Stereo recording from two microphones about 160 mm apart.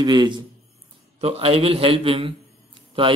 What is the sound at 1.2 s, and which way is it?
A man's voice, 40° right (ahead or behind).